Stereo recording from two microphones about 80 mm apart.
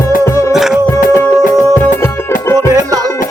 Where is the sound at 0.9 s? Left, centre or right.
Left.